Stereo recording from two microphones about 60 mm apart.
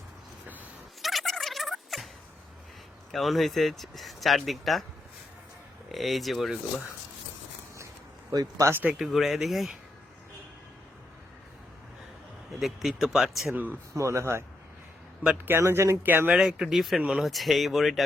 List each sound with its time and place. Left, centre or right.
1.0 s a sound: centre
3.1 s speech: centre
5.9 s speech: centre
8.3 s speech: right
8.7 s speech: right
9.0 s speech: centre
12.5 s speech: centre
13.9 s speech: right
15.4 s speech: right
16.0 s speech: right
16.4 s speech: centre
17.3 s speech: centre